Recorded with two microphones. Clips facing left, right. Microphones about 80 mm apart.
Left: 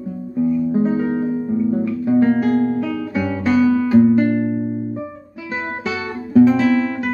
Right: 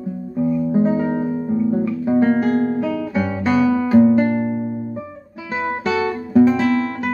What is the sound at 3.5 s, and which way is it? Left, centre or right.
Music, centre.